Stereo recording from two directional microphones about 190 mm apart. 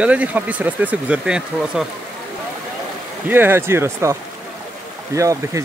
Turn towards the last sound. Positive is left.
turn(degrees=-15)  # may be behind; listen again after turning